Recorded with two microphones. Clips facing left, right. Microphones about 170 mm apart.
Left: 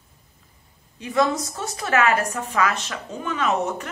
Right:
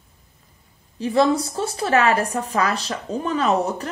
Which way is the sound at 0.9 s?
35° right (ahead or behind).